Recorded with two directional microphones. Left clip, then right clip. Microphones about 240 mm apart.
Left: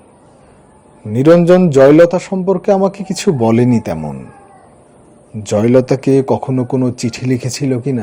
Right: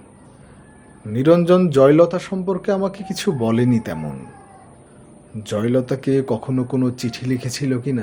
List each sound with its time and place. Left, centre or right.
1.1 s a man's voice: left
5.4 s a man's voice: left